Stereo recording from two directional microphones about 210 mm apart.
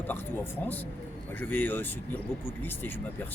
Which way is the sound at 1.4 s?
10° left (ahead or behind).